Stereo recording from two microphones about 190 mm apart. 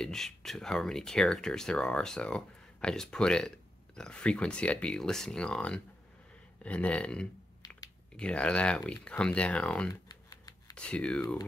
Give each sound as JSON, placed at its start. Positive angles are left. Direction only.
{"t": 0.0, "sound": "speech", "side_deg": 0}
{"t": 6.6, "sound": "a sound", "side_deg": 5}
{"t": 7.6, "sound": "typing", "side_deg": 20}
{"t": 8.2, "sound": "speech", "side_deg": 5}
{"t": 10.0, "sound": "typing", "side_deg": 20}
{"t": 10.8, "sound": "speech", "side_deg": 5}